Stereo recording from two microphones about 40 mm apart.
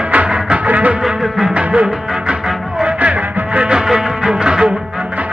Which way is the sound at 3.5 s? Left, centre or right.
Right.